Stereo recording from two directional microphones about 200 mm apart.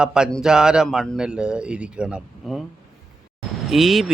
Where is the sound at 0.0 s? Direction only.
5° right (ahead or behind).